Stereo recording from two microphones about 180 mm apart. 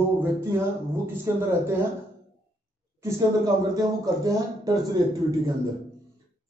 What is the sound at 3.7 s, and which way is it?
Speech, 20° right (ahead or behind).